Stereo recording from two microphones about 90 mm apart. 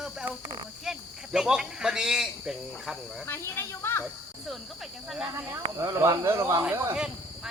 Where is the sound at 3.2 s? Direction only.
25° left (ahead or behind).